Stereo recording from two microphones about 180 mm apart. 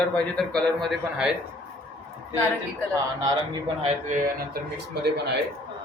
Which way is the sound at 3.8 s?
45° right (ahead or behind).